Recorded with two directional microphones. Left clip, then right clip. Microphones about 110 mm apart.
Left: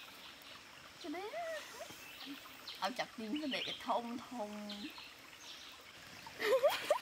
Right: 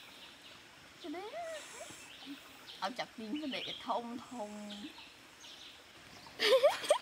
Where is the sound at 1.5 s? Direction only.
15° right (ahead or behind).